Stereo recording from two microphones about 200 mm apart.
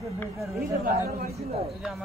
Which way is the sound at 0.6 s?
45° right (ahead or behind).